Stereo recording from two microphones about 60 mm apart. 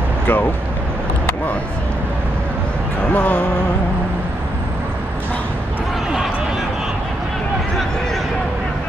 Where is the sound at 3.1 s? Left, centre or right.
Left.